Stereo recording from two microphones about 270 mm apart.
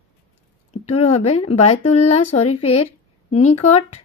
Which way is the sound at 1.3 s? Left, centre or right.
Left.